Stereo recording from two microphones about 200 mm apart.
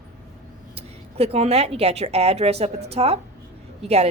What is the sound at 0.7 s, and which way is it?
A woman's voice, 30° right (ahead or behind).